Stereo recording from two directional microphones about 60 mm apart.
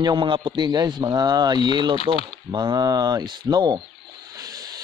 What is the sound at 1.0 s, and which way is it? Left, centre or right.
Speech, right.